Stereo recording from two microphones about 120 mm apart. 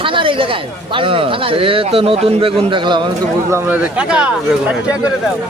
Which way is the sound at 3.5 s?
20° right (ahead or behind).